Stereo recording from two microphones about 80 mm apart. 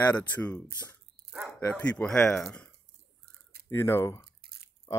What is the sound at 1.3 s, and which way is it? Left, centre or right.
Dog, centre.